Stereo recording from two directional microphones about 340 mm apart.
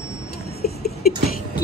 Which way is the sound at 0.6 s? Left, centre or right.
Left.